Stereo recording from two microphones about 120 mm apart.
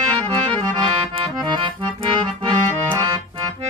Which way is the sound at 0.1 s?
40° right (ahead or behind).